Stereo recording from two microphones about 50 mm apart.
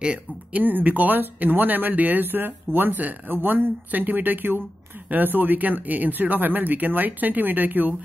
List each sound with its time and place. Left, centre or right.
0.0 s speech: right
0.6 s speech: right